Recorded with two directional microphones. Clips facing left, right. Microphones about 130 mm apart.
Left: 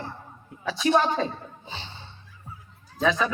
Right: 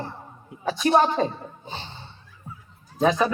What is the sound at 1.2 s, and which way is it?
Speech, 45° right (ahead or behind).